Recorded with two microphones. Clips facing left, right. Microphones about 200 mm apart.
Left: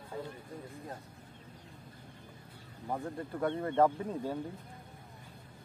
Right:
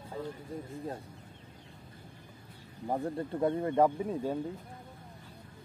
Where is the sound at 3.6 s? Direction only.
15° right (ahead or behind).